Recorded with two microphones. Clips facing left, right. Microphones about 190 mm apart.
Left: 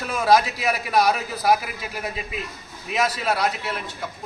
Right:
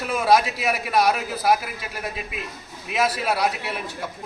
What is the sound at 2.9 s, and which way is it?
Speech, 5° right (ahead or behind).